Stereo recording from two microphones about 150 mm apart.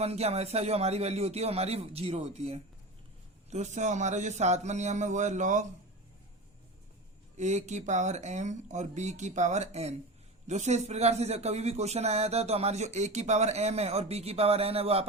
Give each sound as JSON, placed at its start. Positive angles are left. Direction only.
{"t": 0.0, "sound": "a man's voice", "side_deg": -45}
{"t": 7.3, "sound": "a man's voice", "side_deg": -50}